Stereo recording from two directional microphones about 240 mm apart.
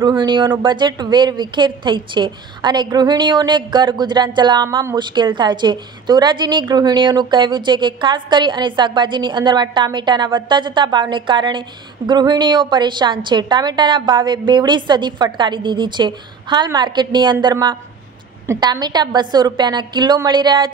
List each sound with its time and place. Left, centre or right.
0.0 s a woman's voice: centre